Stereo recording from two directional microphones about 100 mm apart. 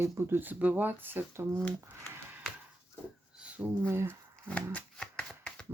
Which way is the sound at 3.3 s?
10° right (ahead or behind).